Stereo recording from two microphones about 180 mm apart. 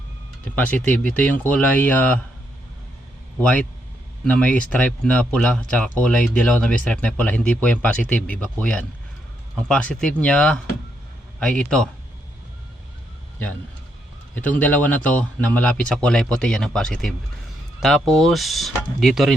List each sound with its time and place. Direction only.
0.4 s speech: 10° left (ahead or behind)
3.3 s speech: 5° left (ahead or behind)
14.3 s speech: 10° left (ahead or behind)